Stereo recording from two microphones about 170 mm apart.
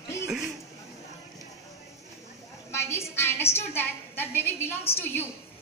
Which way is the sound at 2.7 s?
15° left (ahead or behind).